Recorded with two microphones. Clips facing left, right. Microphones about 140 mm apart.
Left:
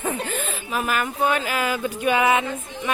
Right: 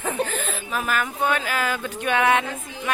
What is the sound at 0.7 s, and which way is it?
Speech, 5° left (ahead or behind).